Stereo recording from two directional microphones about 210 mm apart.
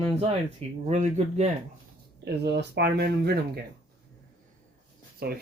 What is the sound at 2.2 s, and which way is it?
Speech, 55° right (ahead or behind).